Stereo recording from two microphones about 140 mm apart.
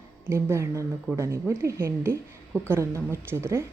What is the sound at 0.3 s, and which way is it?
A woman's voice, 20° right (ahead or behind).